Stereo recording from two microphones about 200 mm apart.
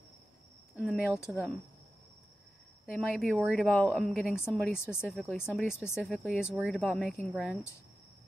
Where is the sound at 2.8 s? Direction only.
Centre (ahead or behind).